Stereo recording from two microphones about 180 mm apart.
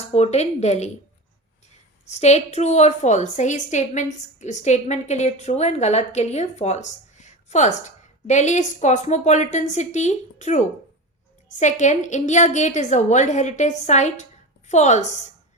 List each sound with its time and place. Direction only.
0.1 s a woman's voice: 40° left (ahead or behind)
2.0 s a woman's voice: 40° left (ahead or behind)